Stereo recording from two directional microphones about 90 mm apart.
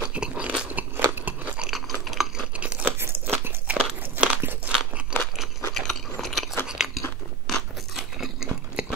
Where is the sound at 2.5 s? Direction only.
15° right (ahead or behind).